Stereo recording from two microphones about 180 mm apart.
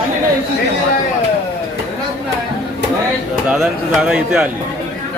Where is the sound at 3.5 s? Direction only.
Centre (ahead or behind).